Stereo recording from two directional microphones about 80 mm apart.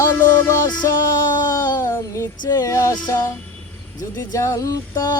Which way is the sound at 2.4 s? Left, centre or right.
Left.